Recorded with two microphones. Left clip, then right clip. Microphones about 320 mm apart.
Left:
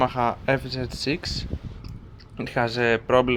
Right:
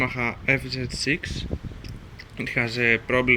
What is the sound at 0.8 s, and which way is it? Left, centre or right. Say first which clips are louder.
Speech: right 2 dB; left.